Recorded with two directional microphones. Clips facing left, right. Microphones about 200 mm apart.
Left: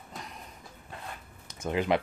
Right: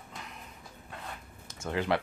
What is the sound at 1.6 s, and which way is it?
Speech, 15° left (ahead or behind).